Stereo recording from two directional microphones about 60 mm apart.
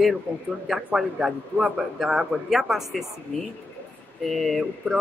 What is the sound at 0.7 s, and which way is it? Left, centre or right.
A man's voice, centre.